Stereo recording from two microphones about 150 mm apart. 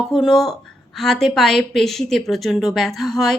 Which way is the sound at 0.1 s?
Centre (ahead or behind).